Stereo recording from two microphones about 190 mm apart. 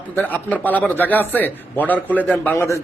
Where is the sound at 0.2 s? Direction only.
10° left (ahead or behind).